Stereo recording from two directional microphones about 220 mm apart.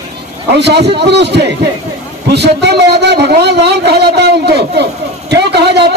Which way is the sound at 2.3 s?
50° right (ahead or behind).